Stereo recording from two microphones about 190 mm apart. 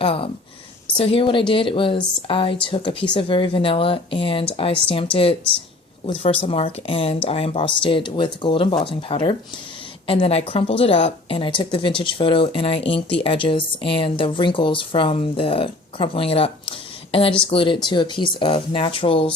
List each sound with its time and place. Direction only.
0.0 s speech: 30° left (ahead or behind)